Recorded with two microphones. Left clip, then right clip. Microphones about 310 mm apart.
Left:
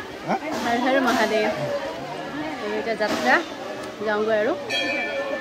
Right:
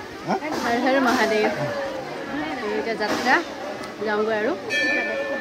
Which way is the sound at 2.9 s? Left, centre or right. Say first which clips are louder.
Left 1 dB; centre.